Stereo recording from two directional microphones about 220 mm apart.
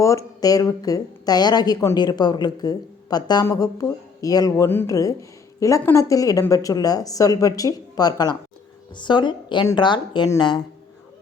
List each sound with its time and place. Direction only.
0.0 s speech: 15° left (ahead or behind)